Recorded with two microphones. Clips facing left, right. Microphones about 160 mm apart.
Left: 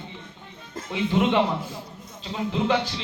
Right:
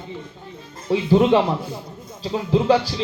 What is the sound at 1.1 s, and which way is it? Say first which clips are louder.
Speech: right 6 dB; 35° right (ahead or behind).